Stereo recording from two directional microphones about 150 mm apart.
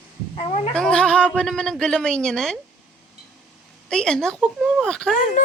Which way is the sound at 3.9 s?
5° left (ahead or behind).